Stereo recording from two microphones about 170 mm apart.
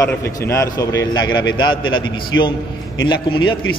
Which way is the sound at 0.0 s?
15° left (ahead or behind).